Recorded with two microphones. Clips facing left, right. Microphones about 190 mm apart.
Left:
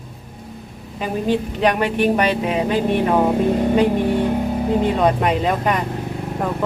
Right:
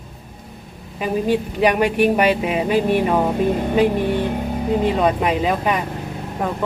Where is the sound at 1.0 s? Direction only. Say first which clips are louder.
Right 1 dB; 10° right (ahead or behind).